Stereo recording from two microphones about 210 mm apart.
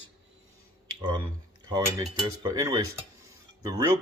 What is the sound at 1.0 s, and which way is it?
A man's voice, 20° right (ahead or behind).